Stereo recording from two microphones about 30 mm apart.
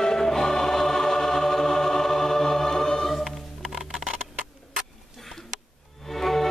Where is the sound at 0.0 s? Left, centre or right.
Centre.